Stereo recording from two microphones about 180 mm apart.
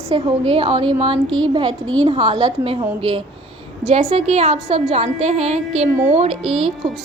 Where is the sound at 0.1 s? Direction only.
30° right (ahead or behind).